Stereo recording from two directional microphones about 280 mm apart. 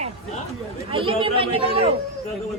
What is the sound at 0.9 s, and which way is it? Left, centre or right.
Speech, centre.